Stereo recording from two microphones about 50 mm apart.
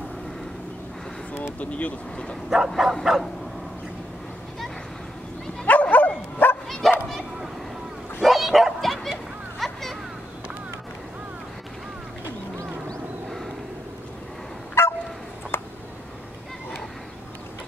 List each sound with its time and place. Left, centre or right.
1.6 s speech: left
2.7 s bow-wow: centre
5.7 s dog: left
6.8 s bow-wow: centre
8.2 s bow-wow: centre
9.6 s a sound: centre
14.8 s fowl: left
15.5 s a sound: left